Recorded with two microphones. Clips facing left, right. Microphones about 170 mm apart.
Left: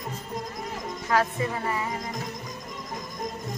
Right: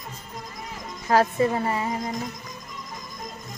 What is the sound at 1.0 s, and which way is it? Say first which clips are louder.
Speech: right 5 dB; 35° right (ahead or behind).